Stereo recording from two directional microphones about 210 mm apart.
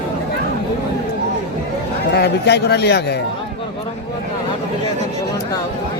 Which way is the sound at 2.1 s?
50° left (ahead or behind).